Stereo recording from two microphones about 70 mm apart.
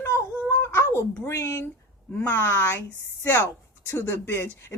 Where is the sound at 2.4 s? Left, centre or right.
Left.